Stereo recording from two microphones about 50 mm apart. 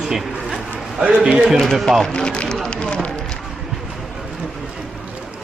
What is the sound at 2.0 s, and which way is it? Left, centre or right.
Speech, centre.